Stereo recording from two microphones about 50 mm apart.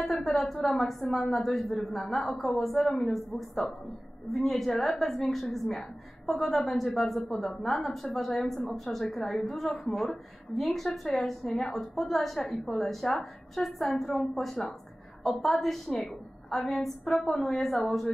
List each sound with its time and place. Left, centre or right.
0.0 s a woman's voice: centre